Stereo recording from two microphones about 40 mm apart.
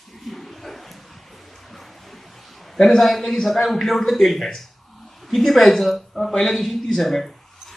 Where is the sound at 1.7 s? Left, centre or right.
Centre.